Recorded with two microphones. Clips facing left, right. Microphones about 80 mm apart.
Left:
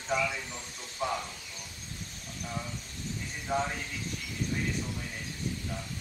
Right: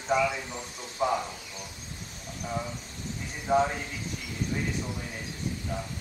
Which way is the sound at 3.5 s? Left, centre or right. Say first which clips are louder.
Right 7 dB; centre.